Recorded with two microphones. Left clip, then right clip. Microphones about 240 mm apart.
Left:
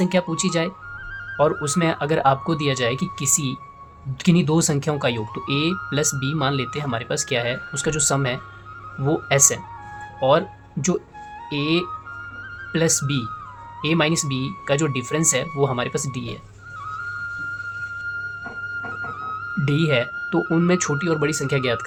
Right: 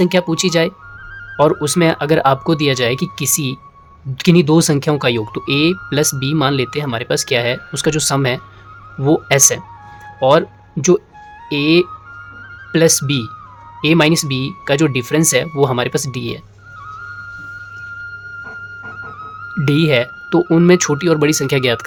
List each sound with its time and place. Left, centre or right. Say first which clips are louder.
0.0 s speech: right 7 dB; right
18.9 s music: left 1 dB; centre
19.6 s speech: right 7 dB; right